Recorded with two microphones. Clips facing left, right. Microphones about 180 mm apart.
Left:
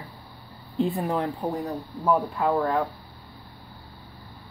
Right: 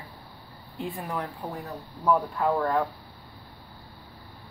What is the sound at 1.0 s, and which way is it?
Speech, 25° left (ahead or behind).